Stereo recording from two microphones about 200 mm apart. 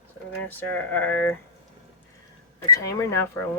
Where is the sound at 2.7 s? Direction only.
15° left (ahead or behind).